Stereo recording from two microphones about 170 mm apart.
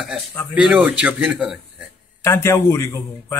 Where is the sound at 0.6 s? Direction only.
5° right (ahead or behind).